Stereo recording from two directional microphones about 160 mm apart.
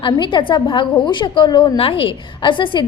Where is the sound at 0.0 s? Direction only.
30° left (ahead or behind).